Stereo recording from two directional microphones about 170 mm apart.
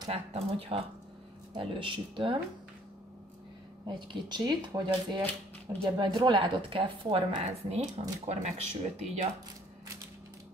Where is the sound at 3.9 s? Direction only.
30° right (ahead or behind).